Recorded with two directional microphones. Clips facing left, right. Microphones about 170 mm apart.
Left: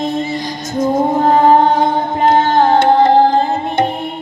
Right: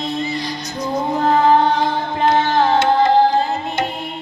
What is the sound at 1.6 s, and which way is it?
Music, 50° left (ahead or behind).